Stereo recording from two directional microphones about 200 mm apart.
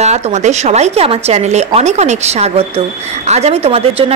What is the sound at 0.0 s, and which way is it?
A woman's voice, 35° right (ahead or behind).